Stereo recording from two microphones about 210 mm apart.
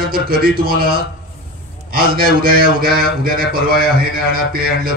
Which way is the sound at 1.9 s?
45° right (ahead or behind).